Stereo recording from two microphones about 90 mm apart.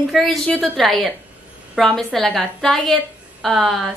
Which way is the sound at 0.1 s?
Centre (ahead or behind).